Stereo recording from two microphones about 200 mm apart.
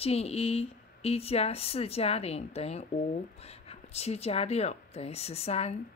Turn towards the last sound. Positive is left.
turn(degrees=30)  # may be behind; listen again after turning